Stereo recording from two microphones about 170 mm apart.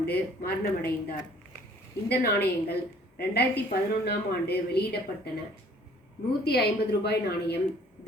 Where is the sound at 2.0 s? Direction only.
70° left (ahead or behind).